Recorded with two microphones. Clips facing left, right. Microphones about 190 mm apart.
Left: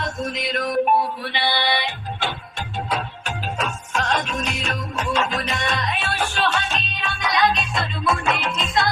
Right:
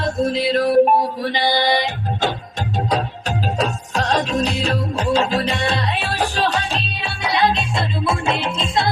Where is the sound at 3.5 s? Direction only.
35° right (ahead or behind).